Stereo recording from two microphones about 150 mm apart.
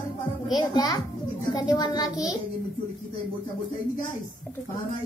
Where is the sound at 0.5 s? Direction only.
25° left (ahead or behind).